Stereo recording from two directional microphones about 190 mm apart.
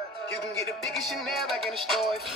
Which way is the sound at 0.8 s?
Centre (ahead or behind).